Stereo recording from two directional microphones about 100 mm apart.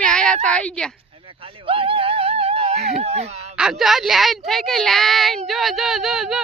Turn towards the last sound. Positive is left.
turn(degrees=-5)  # may be behind; listen again after turning